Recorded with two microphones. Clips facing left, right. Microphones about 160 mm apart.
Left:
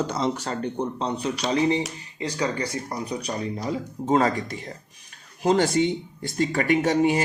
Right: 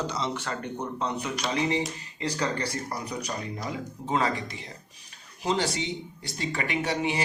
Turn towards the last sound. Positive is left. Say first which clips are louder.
# left 7 dB
turn(degrees=45)  # may be behind; listen again after turning